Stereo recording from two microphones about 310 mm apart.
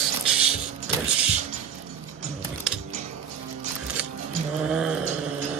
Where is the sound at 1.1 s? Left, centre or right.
Centre.